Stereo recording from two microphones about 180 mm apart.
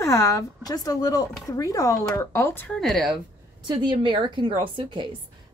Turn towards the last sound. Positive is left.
turn(degrees=-25)  # may be behind; listen again after turning